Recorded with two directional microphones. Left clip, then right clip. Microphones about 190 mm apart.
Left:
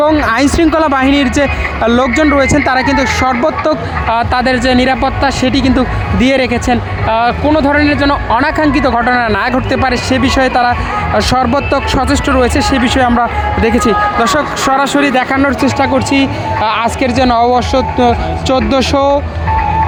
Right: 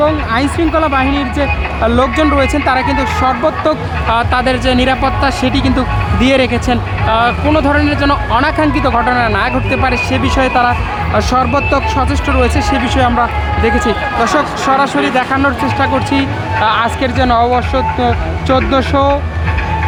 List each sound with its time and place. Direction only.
0.0 s speech: 35° left (ahead or behind)